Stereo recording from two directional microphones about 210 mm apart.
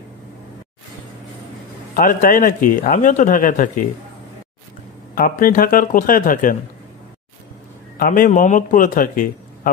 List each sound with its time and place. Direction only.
2.0 s a man's voice: 40° left (ahead or behind)
5.1 s a man's voice: 40° left (ahead or behind)
8.0 s a man's voice: 40° left (ahead or behind)